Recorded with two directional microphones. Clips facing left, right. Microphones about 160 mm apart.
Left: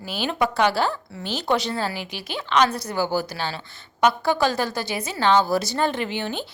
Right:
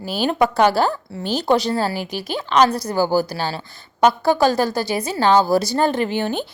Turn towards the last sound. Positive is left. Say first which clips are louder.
# right 6 dB
turn(degrees=-45)  # may be behind; listen again after turning